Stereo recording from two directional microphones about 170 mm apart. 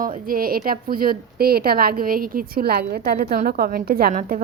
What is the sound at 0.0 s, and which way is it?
A woman's voice, 55° right (ahead or behind).